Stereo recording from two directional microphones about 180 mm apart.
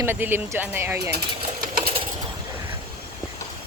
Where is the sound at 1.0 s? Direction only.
65° right (ahead or behind).